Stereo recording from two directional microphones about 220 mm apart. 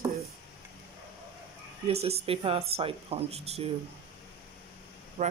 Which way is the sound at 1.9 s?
30° right (ahead or behind).